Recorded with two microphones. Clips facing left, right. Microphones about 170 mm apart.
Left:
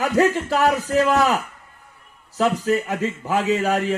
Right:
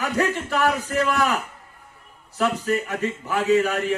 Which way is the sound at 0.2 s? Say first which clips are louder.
Left 4 dB; 40° left (ahead or behind).